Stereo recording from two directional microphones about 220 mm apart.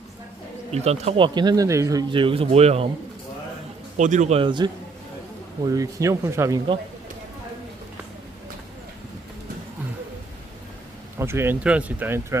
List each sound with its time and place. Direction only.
0.7 s speech: 30° right (ahead or behind)
3.9 s speech: 35° right (ahead or behind); by 6.6 s 10° right (ahead or behind)
11.2 s speech: 10° right (ahead or behind)